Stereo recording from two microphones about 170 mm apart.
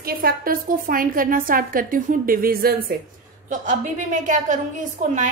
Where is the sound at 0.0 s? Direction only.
60° right (ahead or behind).